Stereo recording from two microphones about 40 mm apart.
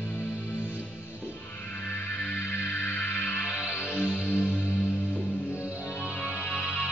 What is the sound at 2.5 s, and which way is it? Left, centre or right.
Music, left.